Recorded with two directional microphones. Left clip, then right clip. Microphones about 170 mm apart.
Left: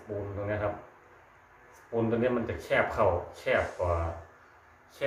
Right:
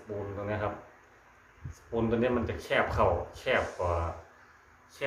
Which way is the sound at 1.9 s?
20° right (ahead or behind).